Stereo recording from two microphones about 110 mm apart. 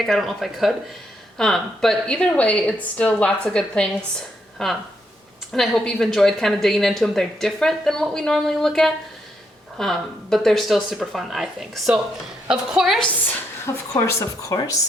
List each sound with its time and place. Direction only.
0.0 s a woman's voice: centre (ahead or behind)
13.9 s speech: 25° left (ahead or behind)
14.5 s speech: 40° left (ahead or behind)